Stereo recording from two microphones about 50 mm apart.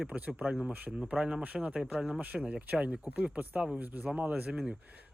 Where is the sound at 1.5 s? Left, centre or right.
Right.